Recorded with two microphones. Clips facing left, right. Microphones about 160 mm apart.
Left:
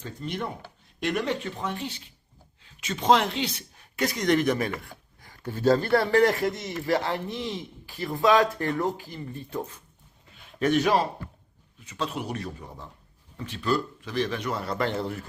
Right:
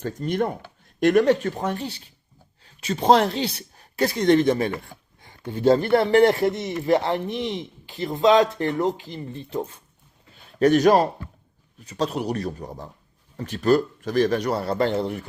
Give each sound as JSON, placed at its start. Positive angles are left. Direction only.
{"t": 0.0, "sound": "a man's voice", "side_deg": -45}
{"t": 10.6, "sound": "a man's voice", "side_deg": -40}